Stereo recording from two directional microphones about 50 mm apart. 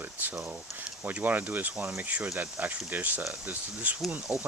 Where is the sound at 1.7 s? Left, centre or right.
Centre.